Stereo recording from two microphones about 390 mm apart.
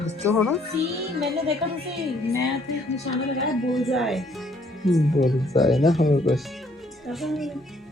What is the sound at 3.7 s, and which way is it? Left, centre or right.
Speech, centre.